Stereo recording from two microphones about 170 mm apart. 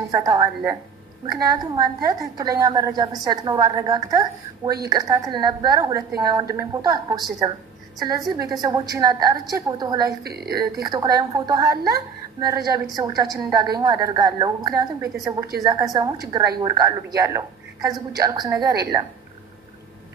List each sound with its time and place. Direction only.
0.1 s a woman's voice: 20° right (ahead or behind)
10.2 s a woman's voice: 70° right (ahead or behind)
10.5 s a woman's voice: 20° right (ahead or behind)